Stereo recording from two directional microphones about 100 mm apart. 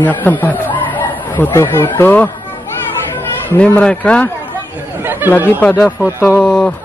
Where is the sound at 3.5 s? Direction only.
15° left (ahead or behind).